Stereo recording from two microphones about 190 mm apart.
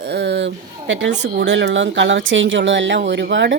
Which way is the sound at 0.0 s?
60° right (ahead or behind).